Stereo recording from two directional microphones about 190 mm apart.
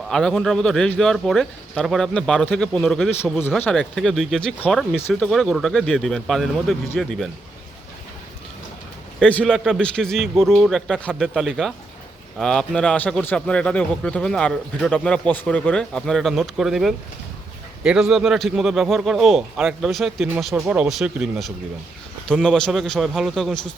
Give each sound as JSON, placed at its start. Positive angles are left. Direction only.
{"t": 0.1, "sound": "a man's voice", "side_deg": 5}
{"t": 9.2, "sound": "a man's voice", "side_deg": 5}